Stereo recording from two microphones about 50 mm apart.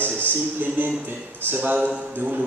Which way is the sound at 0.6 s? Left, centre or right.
Right.